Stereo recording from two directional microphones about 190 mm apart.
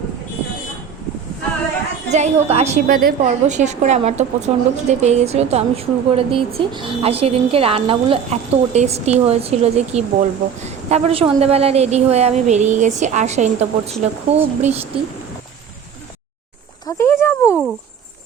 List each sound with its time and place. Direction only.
2.1 s a woman's voice: 35° right (ahead or behind)
2.8 s a woman's voice: 50° right (ahead or behind)
3.2 s a woman's voice: 40° right (ahead or behind)
16.8 s a sound: 10° left (ahead or behind)